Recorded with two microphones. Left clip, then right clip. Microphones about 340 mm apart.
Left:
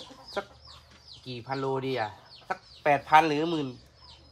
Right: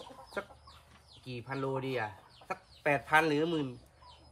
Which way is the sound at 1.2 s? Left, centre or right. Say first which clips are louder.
Left 5 dB; centre.